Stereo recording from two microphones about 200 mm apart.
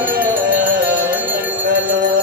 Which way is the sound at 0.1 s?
45° right (ahead or behind).